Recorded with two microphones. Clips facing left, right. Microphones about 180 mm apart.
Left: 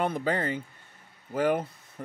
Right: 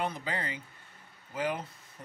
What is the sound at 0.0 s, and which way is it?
Speech, 55° left (ahead or behind).